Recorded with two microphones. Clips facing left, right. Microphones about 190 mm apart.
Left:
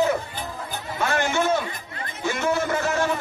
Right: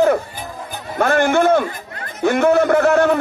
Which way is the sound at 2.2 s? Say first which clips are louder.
Right 10 dB; 60° right (ahead or behind).